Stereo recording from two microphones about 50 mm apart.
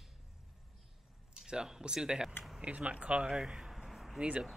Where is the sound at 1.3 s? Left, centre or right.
Centre.